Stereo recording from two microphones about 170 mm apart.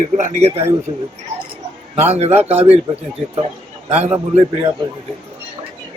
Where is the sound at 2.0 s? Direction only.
40° right (ahead or behind).